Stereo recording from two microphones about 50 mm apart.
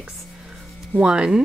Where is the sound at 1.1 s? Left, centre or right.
Centre.